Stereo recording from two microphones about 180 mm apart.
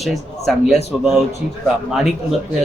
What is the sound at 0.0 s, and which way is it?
A man's voice, centre (ahead or behind).